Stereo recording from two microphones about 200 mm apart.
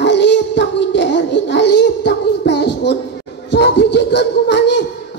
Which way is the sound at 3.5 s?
60° left (ahead or behind).